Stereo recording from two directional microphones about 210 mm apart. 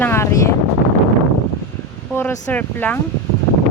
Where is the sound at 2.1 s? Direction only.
10° left (ahead or behind).